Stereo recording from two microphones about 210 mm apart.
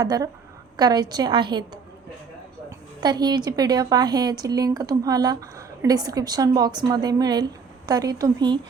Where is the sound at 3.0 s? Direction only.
20° right (ahead or behind).